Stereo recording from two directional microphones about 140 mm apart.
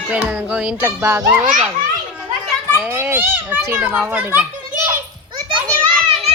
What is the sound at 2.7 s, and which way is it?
Speech, 15° right (ahead or behind).